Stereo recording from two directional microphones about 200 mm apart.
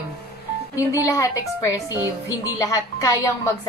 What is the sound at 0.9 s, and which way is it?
A woman's voice, 15° left (ahead or behind).